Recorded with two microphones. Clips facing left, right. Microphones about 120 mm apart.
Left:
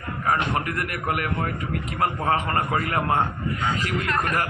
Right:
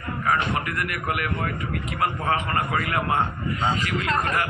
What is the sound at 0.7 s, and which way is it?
A man's voice, 40° left (ahead or behind).